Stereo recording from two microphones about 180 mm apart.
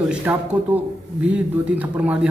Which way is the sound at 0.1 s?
10° right (ahead or behind).